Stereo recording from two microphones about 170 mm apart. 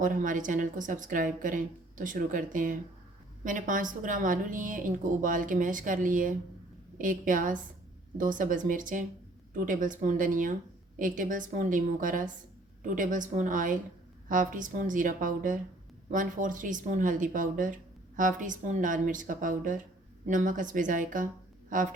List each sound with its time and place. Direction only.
0.0 s a woman's voice: 50° right (ahead or behind)